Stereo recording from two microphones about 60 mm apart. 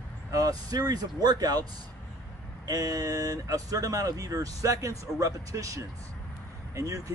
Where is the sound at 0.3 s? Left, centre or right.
Right.